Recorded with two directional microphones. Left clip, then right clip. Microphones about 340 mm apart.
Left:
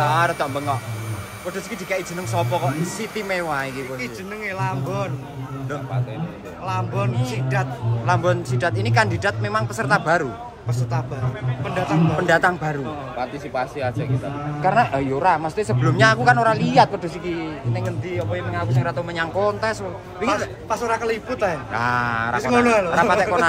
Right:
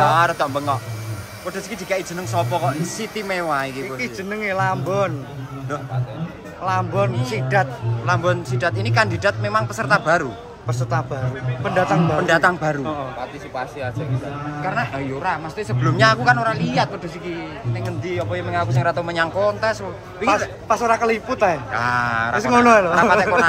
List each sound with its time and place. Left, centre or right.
0.0 s a man's voice: centre
1.9 s a man's voice: centre
4.0 s speech: centre
6.6 s speech: right
8.1 s a man's voice: centre
12.3 s a man's voice: centre
13.6 s speech: left
14.6 s a man's voice: centre
20.2 s speech: right
21.7 s a man's voice: centre
22.4 s speech: right
23.0 s a man's voice: centre